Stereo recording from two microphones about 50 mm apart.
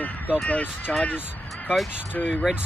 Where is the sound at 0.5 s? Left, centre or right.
Left.